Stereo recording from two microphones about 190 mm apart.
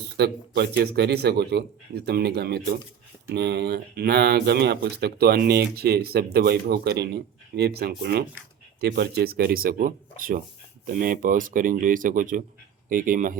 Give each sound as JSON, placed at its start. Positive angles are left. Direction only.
{"t": 0.2, "sound": "speech", "side_deg": -60}